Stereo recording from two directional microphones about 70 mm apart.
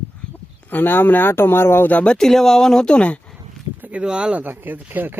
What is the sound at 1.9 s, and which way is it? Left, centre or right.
Speech, left.